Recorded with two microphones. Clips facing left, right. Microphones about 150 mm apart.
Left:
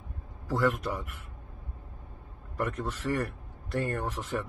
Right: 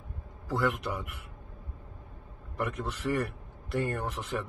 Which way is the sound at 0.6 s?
10° right (ahead or behind).